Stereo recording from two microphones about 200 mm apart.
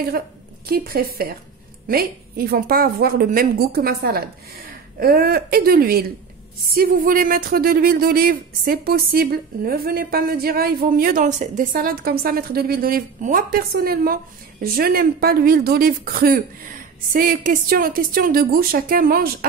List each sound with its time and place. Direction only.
0.7 s speech: 50° right (ahead or behind)